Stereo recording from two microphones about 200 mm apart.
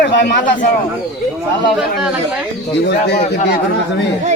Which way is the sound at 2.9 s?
50° left (ahead or behind).